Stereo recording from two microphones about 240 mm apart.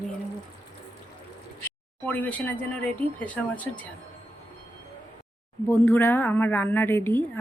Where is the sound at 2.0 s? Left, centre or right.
Centre.